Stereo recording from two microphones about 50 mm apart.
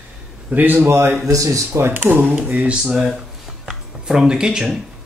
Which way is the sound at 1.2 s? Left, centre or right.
Right.